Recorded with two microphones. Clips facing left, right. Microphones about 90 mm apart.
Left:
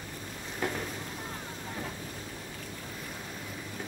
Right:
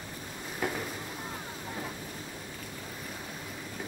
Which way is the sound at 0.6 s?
5° right (ahead or behind).